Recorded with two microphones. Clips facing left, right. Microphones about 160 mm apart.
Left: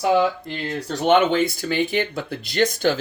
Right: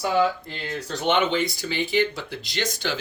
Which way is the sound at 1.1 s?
50° left (ahead or behind).